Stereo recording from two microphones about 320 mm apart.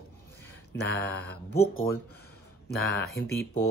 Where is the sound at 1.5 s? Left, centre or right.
Left.